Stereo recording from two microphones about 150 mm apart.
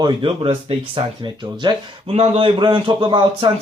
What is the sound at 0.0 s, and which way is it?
Speech, 35° right (ahead or behind).